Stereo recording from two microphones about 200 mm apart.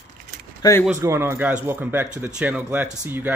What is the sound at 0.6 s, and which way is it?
Speech, 20° left (ahead or behind).